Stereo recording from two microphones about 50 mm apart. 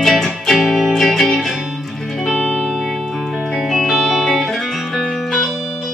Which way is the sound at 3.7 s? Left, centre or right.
Centre.